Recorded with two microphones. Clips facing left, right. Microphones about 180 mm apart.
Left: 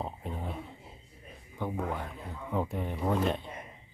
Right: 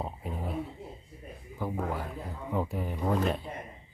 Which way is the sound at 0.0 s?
5° right (ahead or behind).